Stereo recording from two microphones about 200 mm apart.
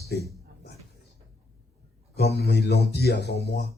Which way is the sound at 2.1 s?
55° left (ahead or behind).